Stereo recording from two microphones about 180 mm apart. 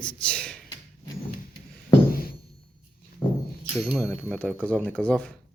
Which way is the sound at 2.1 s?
55° left (ahead or behind).